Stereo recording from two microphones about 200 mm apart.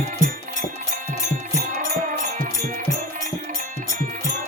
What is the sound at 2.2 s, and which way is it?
Music, 40° right (ahead or behind).